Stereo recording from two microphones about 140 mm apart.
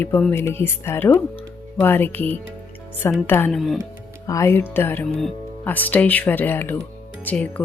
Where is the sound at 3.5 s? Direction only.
Centre (ahead or behind).